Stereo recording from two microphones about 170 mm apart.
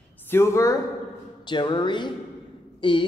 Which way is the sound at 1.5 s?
25° left (ahead or behind).